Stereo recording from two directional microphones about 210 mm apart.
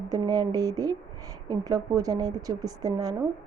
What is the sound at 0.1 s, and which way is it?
A woman's voice, 15° right (ahead or behind).